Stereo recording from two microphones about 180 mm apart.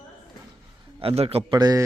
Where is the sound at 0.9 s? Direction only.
35° right (ahead or behind).